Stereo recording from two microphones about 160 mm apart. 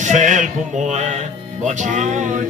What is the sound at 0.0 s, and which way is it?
Speech, 50° right (ahead or behind).